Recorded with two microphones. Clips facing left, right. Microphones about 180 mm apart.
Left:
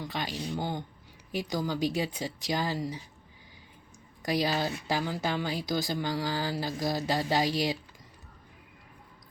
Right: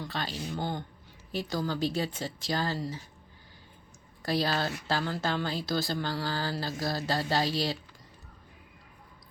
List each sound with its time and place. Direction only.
0.0 s speech: 15° left (ahead or behind)
4.2 s speech: 15° left (ahead or behind)